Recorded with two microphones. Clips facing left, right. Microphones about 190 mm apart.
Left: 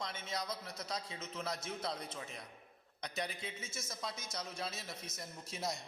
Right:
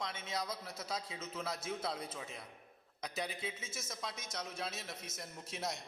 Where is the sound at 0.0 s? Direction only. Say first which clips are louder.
Right 1 dB; centre (ahead or behind).